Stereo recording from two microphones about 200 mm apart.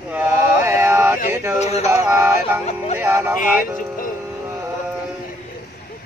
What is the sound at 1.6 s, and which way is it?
Speech, 35° left (ahead or behind).